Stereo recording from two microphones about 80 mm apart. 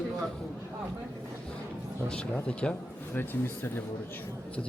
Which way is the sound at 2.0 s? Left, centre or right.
Centre.